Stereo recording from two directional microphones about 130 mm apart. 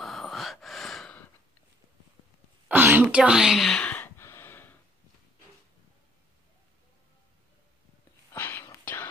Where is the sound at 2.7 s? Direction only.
15° right (ahead or behind); by 4.7 s 15° left (ahead or behind).